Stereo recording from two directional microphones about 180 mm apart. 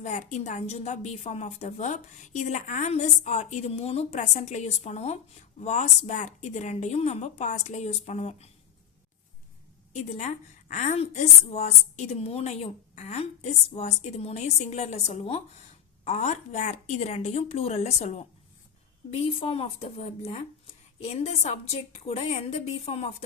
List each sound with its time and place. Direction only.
0.0 s a woman's voice: 40° left (ahead or behind)
9.9 s a woman's voice: 40° left (ahead or behind)